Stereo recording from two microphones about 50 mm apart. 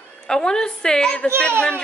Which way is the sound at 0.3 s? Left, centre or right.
Centre.